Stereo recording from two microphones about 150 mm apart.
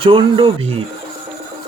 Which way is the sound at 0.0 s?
35° right (ahead or behind).